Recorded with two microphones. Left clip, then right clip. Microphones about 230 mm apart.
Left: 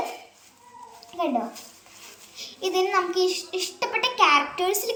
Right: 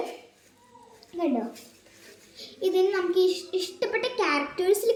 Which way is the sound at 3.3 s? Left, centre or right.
Centre.